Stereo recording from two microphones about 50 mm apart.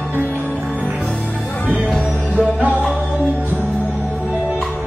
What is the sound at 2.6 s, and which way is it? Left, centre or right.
Music, right.